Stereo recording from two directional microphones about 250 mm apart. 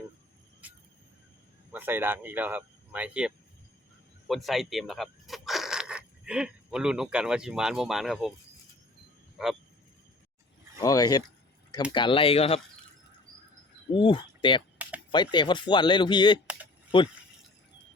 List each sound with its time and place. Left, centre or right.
0.6 s cricket: centre
1.7 s speech: centre
9.4 s a sound: centre
10.8 s speech: centre
13.9 s speech: centre